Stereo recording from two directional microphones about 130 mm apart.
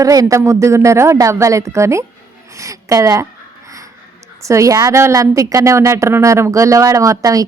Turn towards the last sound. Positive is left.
turn(degrees=-25)  # may be behind; listen again after turning